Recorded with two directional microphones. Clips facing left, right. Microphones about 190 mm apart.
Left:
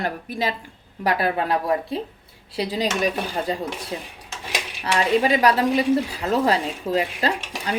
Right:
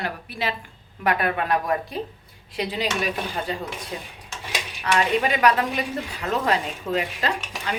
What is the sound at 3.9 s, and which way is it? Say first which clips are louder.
A woman's voice: left 3 dB; 25° left (ahead or behind).